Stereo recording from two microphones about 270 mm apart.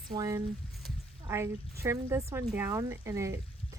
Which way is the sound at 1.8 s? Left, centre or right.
Centre.